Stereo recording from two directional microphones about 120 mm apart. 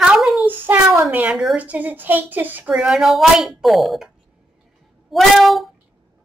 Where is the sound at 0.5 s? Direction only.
15° right (ahead or behind).